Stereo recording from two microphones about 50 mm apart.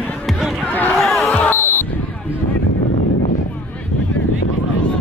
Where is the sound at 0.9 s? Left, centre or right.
Centre.